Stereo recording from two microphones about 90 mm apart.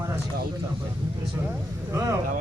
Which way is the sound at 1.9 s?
35° right (ahead or behind).